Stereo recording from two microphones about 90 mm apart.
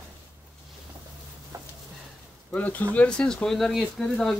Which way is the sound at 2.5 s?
20° left (ahead or behind).